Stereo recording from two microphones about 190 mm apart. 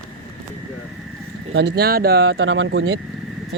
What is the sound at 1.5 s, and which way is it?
Speech, 60° right (ahead or behind).